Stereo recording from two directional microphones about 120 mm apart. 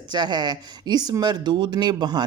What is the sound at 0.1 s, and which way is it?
Speech, 35° right (ahead or behind).